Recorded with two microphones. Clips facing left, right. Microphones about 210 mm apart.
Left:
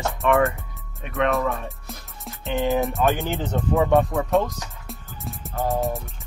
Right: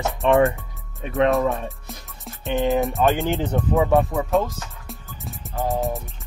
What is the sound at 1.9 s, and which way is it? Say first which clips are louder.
Music: even; centre (ahead or behind).